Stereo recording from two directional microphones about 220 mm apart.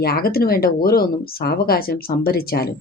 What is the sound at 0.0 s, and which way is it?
Speech, 45° left (ahead or behind).